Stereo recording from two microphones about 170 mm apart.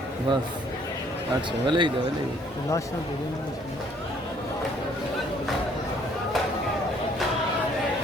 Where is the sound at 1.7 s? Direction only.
30° right (ahead or behind).